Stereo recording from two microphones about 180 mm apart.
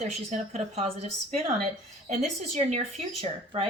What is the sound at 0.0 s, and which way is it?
Speech, 40° right (ahead or behind).